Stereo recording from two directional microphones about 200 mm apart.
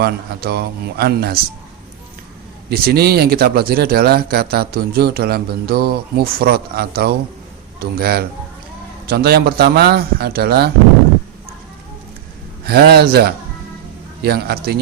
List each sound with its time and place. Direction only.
0.0 s speech: 50° right (ahead or behind)
2.6 s speech: 50° right (ahead or behind)
12.6 s speech: 50° right (ahead or behind)